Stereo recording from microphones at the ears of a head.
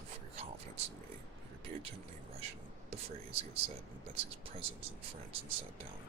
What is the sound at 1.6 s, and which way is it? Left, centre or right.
Speech, right.